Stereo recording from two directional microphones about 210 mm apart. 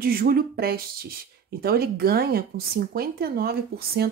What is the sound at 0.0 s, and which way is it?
Speech, 45° right (ahead or behind).